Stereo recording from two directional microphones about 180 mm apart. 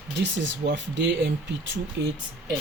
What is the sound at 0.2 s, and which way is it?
Speech, 85° right.